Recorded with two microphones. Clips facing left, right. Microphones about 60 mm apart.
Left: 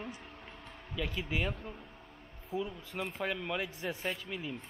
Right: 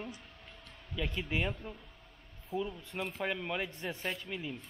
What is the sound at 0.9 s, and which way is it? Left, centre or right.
Speech, centre.